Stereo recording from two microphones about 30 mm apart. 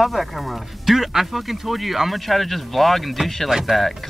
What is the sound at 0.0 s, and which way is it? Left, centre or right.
Speech, centre.